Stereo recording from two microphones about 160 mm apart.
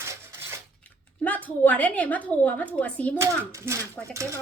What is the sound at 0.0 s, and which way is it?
Dishes, 15° right (ahead or behind).